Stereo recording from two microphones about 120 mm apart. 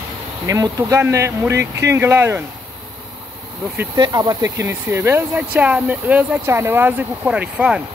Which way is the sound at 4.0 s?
35° right (ahead or behind).